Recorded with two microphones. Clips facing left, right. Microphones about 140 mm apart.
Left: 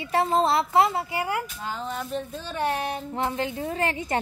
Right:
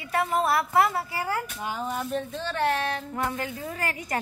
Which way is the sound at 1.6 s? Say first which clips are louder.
Right 1 dB; 10° right (ahead or behind).